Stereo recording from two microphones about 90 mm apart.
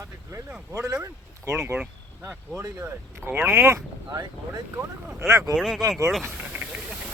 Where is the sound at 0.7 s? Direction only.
35° right (ahead or behind).